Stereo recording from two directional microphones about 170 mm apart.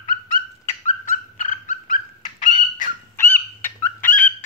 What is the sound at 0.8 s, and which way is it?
Dog, 50° left (ahead or behind).